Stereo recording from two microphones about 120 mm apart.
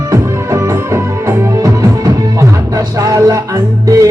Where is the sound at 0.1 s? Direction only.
25° right (ahead or behind).